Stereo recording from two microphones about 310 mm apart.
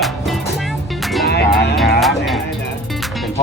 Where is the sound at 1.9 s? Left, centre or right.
Centre.